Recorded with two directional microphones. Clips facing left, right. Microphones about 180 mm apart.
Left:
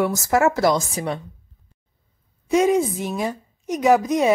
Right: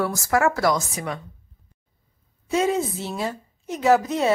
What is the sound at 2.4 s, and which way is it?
A woman's voice, 15° left (ahead or behind).